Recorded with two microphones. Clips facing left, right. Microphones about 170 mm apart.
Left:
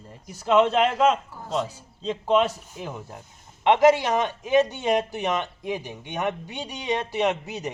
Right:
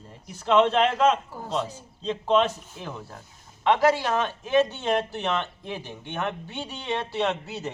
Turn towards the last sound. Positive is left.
turn(degrees=15)  # may be behind; listen again after turning